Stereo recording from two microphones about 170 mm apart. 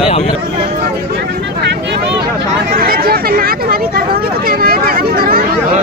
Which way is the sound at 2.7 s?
60° right (ahead or behind).